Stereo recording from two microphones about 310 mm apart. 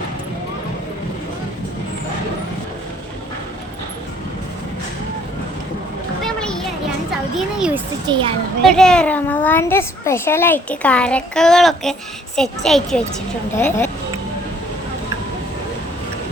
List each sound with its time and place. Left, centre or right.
6.2 s children playing: centre
7.3 s a sound: centre
8.0 s a child's voice: centre
8.6 s a child's voice: centre